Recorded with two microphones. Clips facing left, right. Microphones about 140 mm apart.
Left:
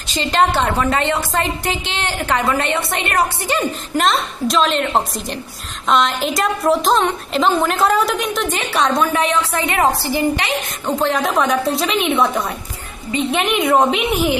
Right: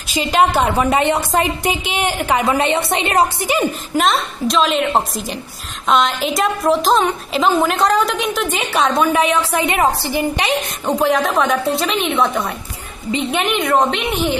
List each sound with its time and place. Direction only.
0.1 s a woman's voice: 10° right (ahead or behind)
4.0 s a woman's voice: centre (ahead or behind)
11.2 s a woman's voice: centre (ahead or behind)